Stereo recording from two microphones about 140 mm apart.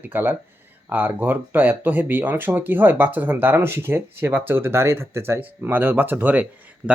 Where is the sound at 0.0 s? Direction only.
15° right (ahead or behind).